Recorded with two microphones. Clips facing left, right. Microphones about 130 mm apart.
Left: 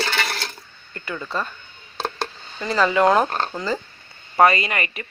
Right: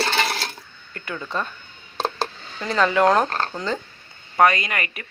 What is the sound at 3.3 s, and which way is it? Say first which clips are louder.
Speech: left 1 dB; 15° left (ahead or behind).